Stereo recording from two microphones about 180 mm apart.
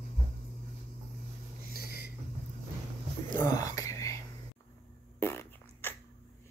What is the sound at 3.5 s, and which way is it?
Whispering, 20° left (ahead or behind).